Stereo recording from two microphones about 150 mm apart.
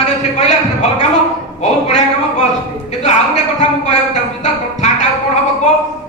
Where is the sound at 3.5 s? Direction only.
50° left (ahead or behind).